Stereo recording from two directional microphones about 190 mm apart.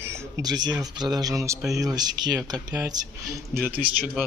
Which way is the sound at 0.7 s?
20° right (ahead or behind).